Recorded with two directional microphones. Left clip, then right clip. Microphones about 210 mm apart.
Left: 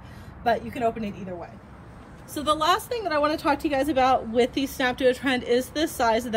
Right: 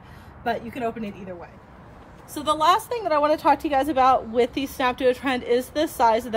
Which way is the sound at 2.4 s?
30° right (ahead or behind).